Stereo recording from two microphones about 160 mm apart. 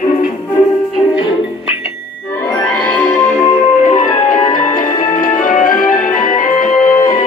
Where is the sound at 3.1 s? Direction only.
45° left (ahead or behind).